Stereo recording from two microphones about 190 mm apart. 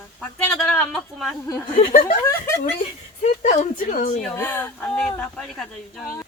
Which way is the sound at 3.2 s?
40° left (ahead or behind).